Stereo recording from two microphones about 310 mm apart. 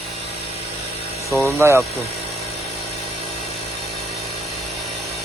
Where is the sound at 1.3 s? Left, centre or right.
Centre.